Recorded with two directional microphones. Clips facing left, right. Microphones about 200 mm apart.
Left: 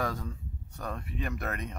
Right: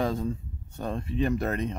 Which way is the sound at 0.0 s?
25° right (ahead or behind).